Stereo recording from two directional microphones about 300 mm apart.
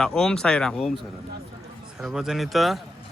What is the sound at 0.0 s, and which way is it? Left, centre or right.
Speech, centre.